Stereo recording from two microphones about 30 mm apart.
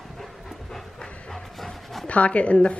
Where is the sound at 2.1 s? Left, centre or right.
Left.